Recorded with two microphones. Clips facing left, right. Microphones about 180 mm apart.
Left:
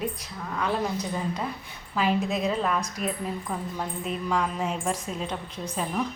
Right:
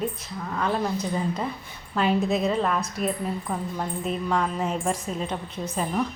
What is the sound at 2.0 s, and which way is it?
A woman's voice, centre (ahead or behind).